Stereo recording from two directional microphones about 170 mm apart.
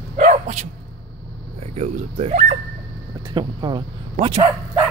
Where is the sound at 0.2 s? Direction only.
45° right (ahead or behind).